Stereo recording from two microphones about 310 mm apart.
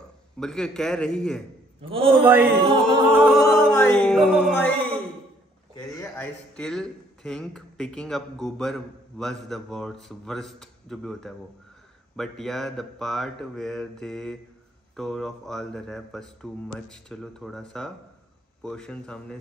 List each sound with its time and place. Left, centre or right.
0.4 s a man's voice: centre
1.8 s music: centre
2.2 s music: centre
3.5 s a man's voice: centre